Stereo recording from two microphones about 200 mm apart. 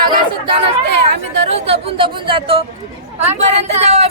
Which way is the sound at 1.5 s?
30° right (ahead or behind).